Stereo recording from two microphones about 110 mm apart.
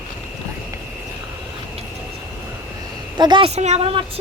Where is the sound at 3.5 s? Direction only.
80° right.